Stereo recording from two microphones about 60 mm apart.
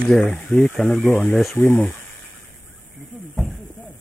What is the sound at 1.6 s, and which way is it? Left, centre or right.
Speech, left.